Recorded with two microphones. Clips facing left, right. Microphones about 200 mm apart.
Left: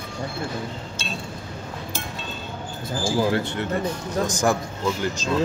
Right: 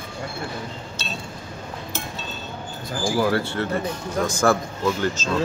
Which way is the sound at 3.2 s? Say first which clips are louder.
Right 1 dB; 20° left (ahead or behind).